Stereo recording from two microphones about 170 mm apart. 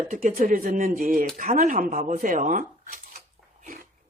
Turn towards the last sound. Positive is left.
turn(degrees=-55)  # may be behind; listen again after turning